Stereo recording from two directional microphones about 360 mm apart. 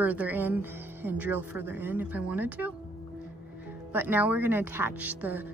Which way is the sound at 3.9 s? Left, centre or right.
Centre.